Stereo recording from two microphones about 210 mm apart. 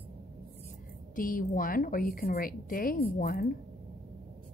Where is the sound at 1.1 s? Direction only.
40° left (ahead or behind).